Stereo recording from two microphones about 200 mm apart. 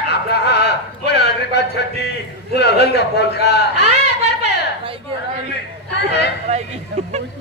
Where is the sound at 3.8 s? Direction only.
30° right (ahead or behind).